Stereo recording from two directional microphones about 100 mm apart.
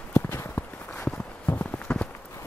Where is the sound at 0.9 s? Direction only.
10° left (ahead or behind).